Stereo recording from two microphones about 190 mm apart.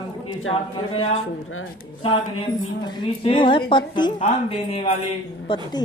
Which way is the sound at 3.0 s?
25° left (ahead or behind).